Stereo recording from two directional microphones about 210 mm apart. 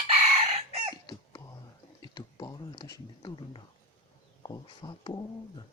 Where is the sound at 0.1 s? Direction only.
25° right (ahead or behind).